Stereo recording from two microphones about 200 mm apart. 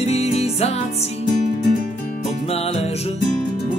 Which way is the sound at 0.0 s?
30° left (ahead or behind).